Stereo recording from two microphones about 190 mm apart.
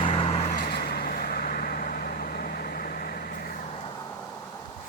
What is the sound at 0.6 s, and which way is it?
Vehicle, 55° left (ahead or behind).